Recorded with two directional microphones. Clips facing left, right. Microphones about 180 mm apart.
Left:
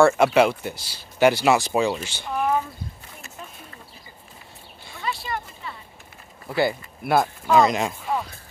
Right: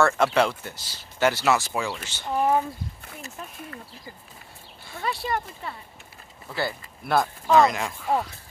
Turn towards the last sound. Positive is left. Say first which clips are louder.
# left 1 dB
turn(degrees=20)  # may be behind; listen again after turning